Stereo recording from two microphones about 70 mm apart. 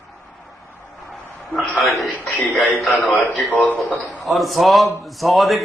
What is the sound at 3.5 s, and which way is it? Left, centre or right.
Speech, centre.